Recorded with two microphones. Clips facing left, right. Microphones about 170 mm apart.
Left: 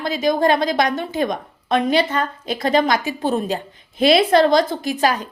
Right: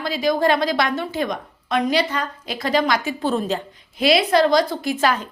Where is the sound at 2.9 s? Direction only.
15° left (ahead or behind).